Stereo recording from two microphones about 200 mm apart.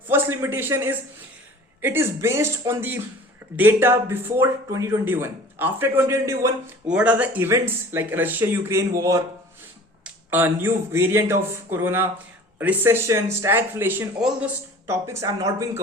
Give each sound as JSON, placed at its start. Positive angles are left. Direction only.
{"t": 0.1, "sound": "a man's voice", "side_deg": -10}